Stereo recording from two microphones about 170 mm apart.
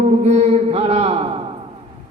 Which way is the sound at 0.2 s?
40° right (ahead or behind).